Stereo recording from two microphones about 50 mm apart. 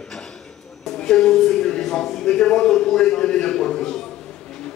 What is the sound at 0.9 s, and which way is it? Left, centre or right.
Speech, centre.